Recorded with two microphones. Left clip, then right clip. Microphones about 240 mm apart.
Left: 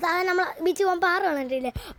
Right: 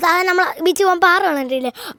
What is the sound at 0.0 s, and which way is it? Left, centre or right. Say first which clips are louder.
A woman's voice: right 9 dB; right.